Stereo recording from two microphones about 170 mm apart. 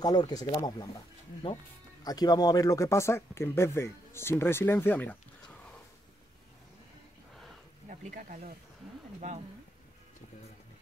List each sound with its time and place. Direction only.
0.0 s speech: 25° left (ahead or behind)
2.0 s speech: 25° left (ahead or behind)
7.9 s speech: 55° right (ahead or behind)